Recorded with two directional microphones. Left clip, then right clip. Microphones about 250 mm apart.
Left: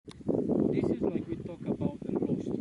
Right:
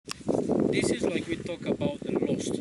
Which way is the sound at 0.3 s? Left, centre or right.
Left.